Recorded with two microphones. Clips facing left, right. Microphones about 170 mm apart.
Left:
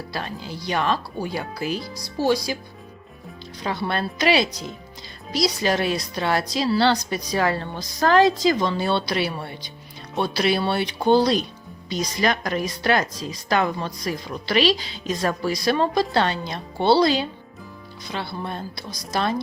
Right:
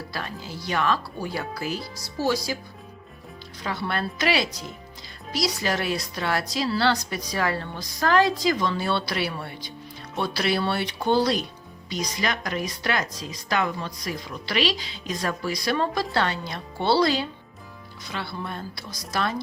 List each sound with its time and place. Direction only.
0.1 s speech: 20° left (ahead or behind)
3.6 s speech: 20° left (ahead or behind)
11.9 s a woman's voice: 35° left (ahead or behind)